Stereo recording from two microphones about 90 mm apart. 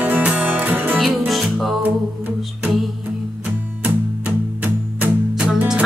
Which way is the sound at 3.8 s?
20° right (ahead or behind).